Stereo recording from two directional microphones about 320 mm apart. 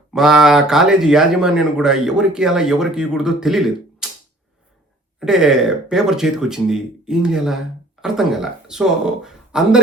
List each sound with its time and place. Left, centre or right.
0.1 s speech: centre
5.2 s speech: centre